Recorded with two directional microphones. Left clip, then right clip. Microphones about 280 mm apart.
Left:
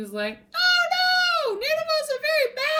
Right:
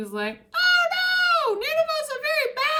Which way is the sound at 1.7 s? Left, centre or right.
Right.